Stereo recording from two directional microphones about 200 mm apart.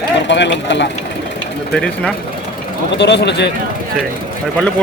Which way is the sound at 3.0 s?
60° left (ahead or behind).